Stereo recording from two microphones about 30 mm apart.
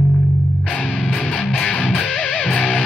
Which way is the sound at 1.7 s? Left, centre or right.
Left.